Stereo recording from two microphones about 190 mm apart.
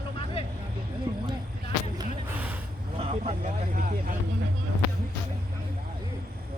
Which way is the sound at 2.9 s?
30° right (ahead or behind).